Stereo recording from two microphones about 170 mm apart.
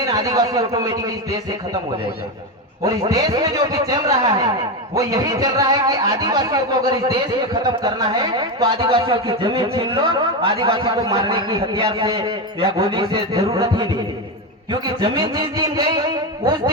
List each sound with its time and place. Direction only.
0.0 s a man's voice: 20° right (ahead or behind)
2.8 s a man's voice: 20° right (ahead or behind)